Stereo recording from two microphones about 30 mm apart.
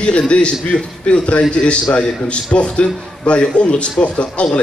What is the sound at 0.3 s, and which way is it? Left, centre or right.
A man's voice, left.